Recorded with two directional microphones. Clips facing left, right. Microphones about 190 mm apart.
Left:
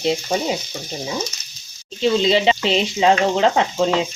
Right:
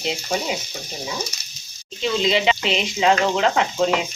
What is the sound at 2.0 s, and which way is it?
Speech, 30° left (ahead or behind).